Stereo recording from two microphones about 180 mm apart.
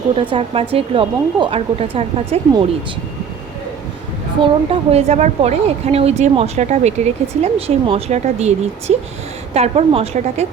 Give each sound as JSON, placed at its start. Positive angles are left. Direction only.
{"t": 0.2, "sound": "a woman's voice", "side_deg": -30}
{"t": 4.7, "sound": "a woman's voice", "side_deg": -35}